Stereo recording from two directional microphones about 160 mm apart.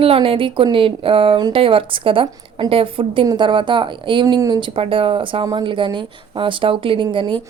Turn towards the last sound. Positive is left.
turn(degrees=-30)  # may be behind; listen again after turning